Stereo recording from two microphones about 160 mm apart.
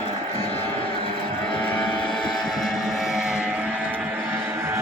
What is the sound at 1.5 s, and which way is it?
Vehicle, 5° left (ahead or behind).